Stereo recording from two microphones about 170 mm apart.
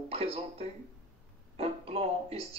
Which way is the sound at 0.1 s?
35° right (ahead or behind).